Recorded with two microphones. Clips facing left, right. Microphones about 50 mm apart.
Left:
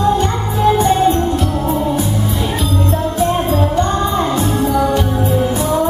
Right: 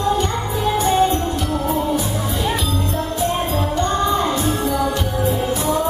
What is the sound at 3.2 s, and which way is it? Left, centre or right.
Music, left.